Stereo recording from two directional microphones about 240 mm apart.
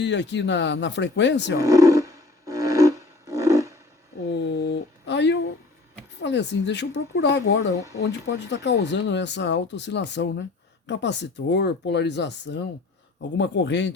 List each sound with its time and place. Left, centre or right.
0.0 s speech: left
1.5 s roar: centre
4.3 s a sound: left
6.2 s speech: left